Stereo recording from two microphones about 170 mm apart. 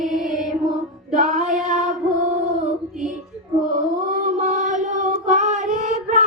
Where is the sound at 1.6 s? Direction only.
45° right (ahead or behind).